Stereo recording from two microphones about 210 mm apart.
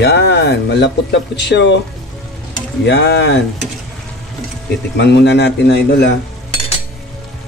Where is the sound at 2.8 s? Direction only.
55° left (ahead or behind).